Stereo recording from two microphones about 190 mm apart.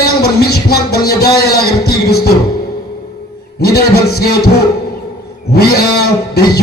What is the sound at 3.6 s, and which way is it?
Speech, 55° left (ahead or behind).